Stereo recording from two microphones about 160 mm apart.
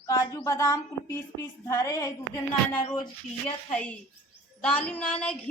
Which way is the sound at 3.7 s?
5° left (ahead or behind).